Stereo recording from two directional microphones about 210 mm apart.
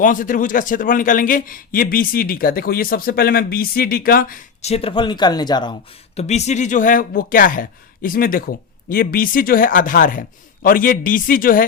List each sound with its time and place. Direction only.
0.0 s a man's voice: 40° left (ahead or behind); by 5.7 s 20° left (ahead or behind)
6.1 s a man's voice: 30° left (ahead or behind)